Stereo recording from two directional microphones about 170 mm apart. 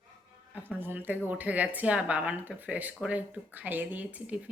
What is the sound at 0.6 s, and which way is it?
Speech, 10° right (ahead or behind).